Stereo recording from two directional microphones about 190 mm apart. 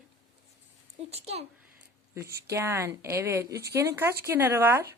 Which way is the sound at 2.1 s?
15° right (ahead or behind).